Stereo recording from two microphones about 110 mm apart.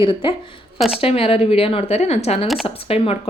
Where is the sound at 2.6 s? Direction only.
60° left (ahead or behind).